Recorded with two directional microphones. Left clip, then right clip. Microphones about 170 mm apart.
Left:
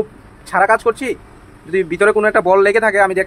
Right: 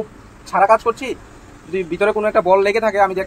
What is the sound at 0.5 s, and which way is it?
Speech, 40° left (ahead or behind).